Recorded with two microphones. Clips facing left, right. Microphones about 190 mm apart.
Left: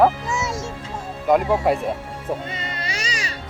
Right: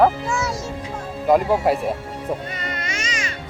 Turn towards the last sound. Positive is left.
turn(degrees=35)  # may be behind; listen again after turning